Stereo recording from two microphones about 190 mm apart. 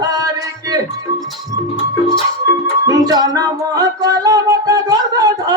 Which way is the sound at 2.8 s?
20° right (ahead or behind).